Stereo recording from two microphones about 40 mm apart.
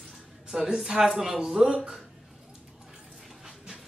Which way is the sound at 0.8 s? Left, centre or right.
Centre.